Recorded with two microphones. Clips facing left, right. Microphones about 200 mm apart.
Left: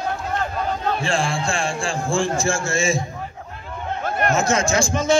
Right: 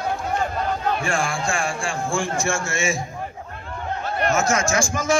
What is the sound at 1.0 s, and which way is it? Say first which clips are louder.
A man's voice: left 2 dB; 25° left (ahead or behind).